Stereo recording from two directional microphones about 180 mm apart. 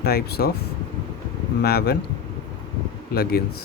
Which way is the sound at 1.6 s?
60° left (ahead or behind).